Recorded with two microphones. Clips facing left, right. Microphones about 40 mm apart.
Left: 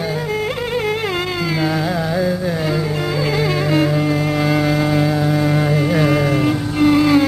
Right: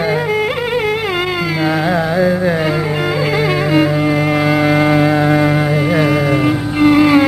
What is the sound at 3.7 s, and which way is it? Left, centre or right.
Music, centre.